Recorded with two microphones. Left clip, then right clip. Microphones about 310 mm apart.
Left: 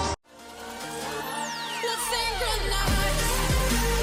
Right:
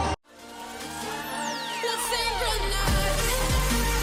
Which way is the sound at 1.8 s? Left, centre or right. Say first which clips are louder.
Even; centre.